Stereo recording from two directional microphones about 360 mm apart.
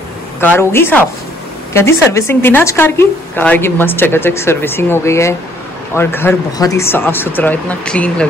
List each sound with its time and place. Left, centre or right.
0.4 s a woman's voice: centre